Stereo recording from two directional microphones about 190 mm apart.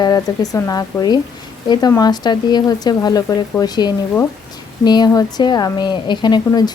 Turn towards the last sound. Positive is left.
turn(degrees=20)  # may be behind; listen again after turning